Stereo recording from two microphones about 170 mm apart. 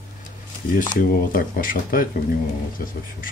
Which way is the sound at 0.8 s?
55° left (ahead or behind).